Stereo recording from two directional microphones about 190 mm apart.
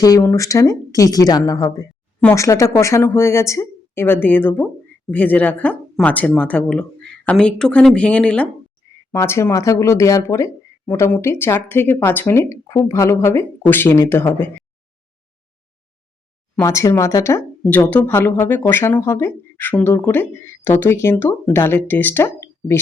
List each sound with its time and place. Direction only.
0.0 s speech: 15° left (ahead or behind)
16.6 s speech: 15° left (ahead or behind)